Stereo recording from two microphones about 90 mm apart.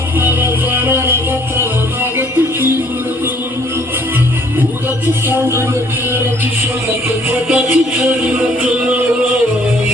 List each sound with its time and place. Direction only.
0.2 s music: 25° right (ahead or behind)
5.0 s music: 25° right (ahead or behind)
7.5 s music: 25° right (ahead or behind)